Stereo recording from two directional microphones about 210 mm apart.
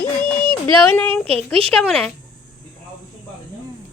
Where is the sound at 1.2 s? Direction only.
25° right (ahead or behind).